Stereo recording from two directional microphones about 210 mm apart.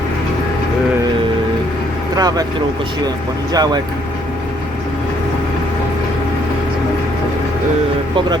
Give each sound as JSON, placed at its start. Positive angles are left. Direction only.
{"t": 2.1, "sound": "speech", "side_deg": -20}
{"t": 3.5, "sound": "speech", "side_deg": -20}